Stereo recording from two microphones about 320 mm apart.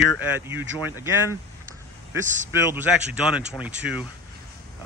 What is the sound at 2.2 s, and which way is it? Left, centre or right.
Speech, right.